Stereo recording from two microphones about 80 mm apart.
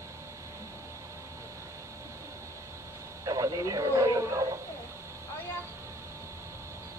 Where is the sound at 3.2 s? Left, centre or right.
Right.